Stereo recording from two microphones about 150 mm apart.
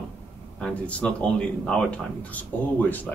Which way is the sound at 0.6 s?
5° left (ahead or behind).